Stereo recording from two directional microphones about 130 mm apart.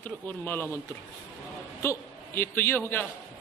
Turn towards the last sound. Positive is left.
turn(degrees=15)  # may be behind; listen again after turning